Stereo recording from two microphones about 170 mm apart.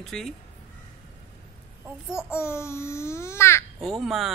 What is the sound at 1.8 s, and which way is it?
Speech, 5° right (ahead or behind).